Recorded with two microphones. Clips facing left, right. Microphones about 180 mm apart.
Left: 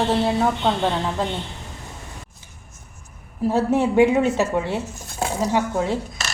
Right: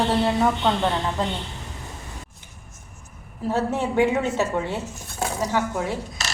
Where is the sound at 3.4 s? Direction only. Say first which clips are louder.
Left 5 dB; 10° left (ahead or behind).